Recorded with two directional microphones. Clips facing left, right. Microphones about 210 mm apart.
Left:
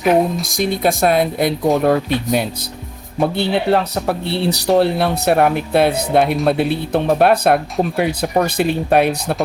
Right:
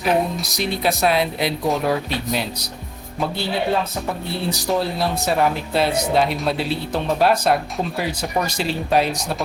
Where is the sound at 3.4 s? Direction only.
65° left (ahead or behind).